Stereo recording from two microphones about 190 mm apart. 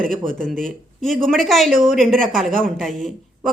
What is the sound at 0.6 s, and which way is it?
Speech, centre (ahead or behind).